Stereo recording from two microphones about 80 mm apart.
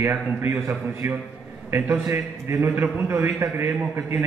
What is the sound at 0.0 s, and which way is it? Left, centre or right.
A man's voice, right.